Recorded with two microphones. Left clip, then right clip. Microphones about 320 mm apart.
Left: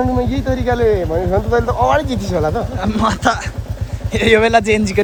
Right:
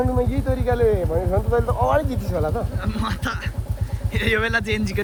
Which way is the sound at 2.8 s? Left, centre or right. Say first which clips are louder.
Left 11 dB; centre.